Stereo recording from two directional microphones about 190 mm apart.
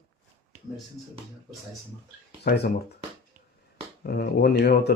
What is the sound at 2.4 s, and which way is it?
Speech, 60° left (ahead or behind).